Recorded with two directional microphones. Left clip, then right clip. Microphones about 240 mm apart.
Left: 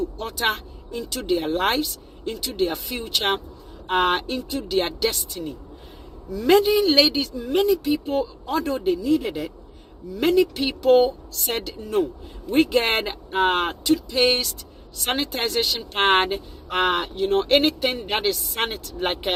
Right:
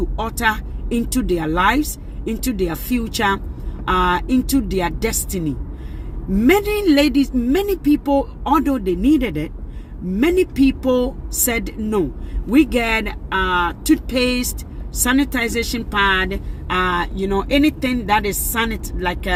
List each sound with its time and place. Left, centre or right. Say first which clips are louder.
0.3 s speech: right 4 dB; centre